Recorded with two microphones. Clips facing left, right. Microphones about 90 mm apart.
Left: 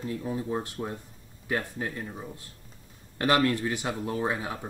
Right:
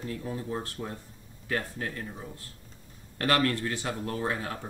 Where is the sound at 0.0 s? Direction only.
15° left (ahead or behind).